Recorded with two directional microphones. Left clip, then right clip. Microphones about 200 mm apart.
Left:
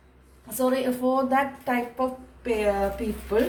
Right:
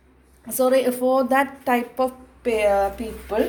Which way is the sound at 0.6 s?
55° right (ahead or behind).